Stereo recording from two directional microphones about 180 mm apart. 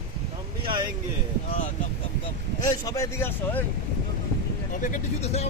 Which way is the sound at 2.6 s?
20° left (ahead or behind).